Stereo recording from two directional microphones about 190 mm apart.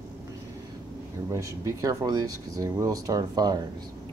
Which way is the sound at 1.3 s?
15° right (ahead or behind).